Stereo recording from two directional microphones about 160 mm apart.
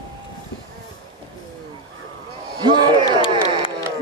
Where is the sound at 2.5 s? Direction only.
30° right (ahead or behind).